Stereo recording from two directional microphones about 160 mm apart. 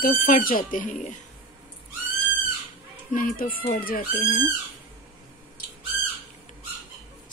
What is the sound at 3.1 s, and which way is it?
Speech, 60° left (ahead or behind).